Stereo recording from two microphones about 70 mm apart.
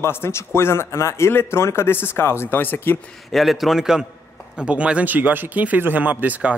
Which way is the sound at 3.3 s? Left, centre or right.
Centre.